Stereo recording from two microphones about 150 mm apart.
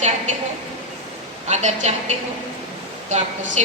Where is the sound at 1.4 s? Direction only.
50° right (ahead or behind).